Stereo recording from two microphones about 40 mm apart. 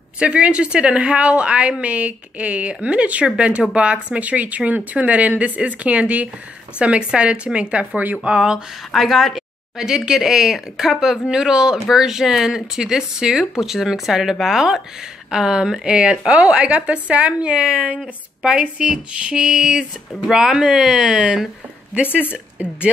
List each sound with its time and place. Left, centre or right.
0.2 s a woman's voice: right
9.0 s a woman's voice: centre
21.9 s a woman's voice: right